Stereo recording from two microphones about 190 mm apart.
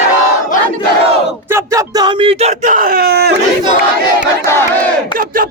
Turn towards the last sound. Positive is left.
turn(degrees=15)  # may be behind; listen again after turning